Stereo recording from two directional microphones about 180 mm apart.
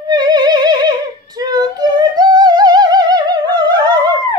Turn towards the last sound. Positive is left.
turn(degrees=-20)  # may be behind; listen again after turning